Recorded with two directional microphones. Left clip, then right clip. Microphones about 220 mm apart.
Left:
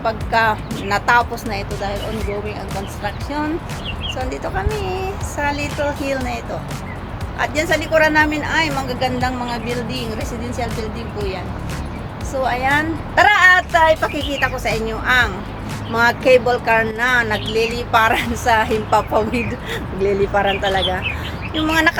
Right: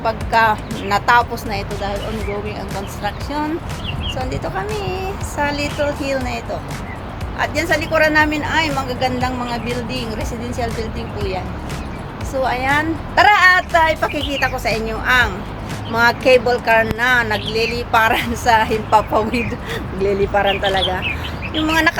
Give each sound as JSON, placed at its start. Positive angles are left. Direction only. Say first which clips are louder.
{"t": 0.0, "sound": "speech", "louder": "right 2 dB", "side_deg": -5}
{"t": 4.2, "sound": "speech", "louder": "even", "side_deg": -5}
{"t": 12.4, "sound": "speech", "louder": "even", "side_deg": -5}